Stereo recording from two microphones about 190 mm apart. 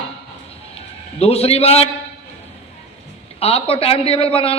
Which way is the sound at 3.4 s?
30° left (ahead or behind).